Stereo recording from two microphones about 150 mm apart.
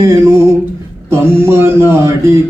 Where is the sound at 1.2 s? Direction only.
15° right (ahead or behind).